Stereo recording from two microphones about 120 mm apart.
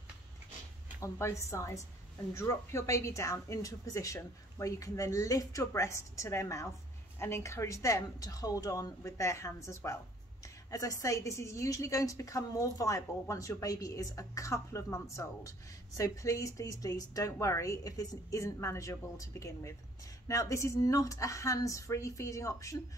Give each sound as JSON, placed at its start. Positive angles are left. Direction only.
{"t": 1.0, "sound": "a woman's voice", "side_deg": 25}